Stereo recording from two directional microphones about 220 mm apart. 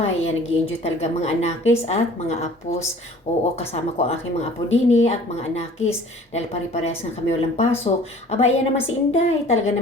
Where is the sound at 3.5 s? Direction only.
30° left (ahead or behind).